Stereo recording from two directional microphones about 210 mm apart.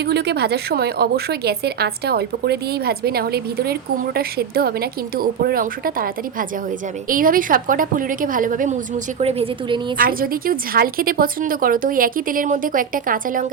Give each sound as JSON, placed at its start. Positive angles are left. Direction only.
{"t": 0.0, "sound": "a woman's voice", "side_deg": -50}
{"t": 7.1, "sound": "a woman's voice", "side_deg": -40}
{"t": 9.1, "sound": "a woman's voice", "side_deg": -30}
{"t": 10.0, "sound": "a woman's voice", "side_deg": -45}